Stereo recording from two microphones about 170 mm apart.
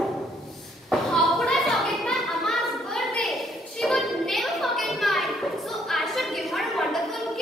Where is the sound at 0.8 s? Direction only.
Centre (ahead or behind).